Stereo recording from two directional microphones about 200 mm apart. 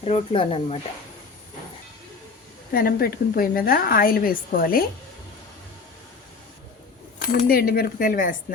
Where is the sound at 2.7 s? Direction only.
50° left (ahead or behind).